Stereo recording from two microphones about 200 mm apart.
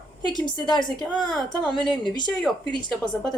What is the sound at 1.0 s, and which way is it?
Speech, 5° left (ahead or behind).